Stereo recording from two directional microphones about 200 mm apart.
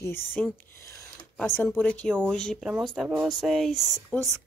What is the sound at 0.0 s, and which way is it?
Speech, 10° left (ahead or behind).